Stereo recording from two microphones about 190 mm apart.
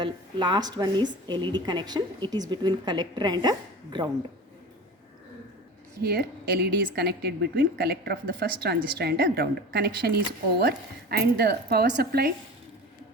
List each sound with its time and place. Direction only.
0.0 s a woman's voice: 25° right (ahead or behind)
6.0 s a woman's voice: 55° right (ahead or behind)